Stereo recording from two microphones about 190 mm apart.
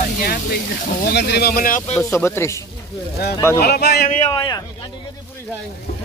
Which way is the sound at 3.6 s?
55° left (ahead or behind).